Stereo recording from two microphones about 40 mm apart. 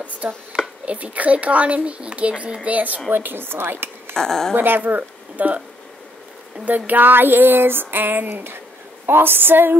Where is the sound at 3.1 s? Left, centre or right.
Right.